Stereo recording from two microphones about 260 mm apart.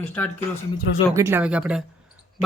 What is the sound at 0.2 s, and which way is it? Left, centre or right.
Speech, centre.